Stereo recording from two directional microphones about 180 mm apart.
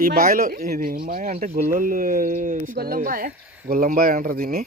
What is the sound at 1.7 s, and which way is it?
Speech, 50° right (ahead or behind).